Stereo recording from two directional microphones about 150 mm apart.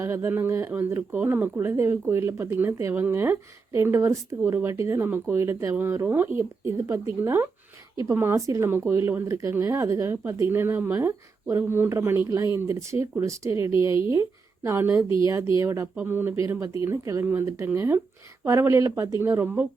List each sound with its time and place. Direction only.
0.0 s speech: 15° right (ahead or behind)